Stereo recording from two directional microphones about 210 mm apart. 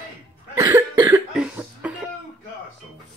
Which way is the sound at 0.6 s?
20° right (ahead or behind).